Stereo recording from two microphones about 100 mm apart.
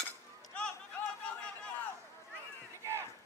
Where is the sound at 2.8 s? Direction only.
25° right (ahead or behind).